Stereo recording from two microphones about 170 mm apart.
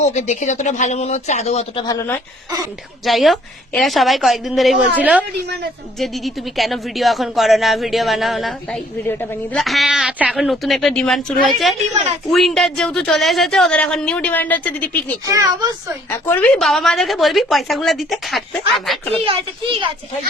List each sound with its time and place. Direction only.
0.0 s speech: 45° left (ahead or behind)
3.0 s speech: centre (ahead or behind)
9.0 s a woman's voice: 15° left (ahead or behind)
9.6 s speech: centre (ahead or behind)
15.3 s a child's voice: 20° right (ahead or behind)
16.0 s a woman's voice: 15° left (ahead or behind)
16.6 s speech: centre (ahead or behind)
19.2 s a child's voice: 30° right (ahead or behind)